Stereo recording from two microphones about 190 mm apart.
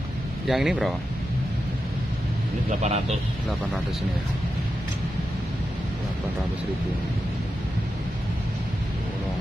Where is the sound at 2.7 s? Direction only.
35° right (ahead or behind).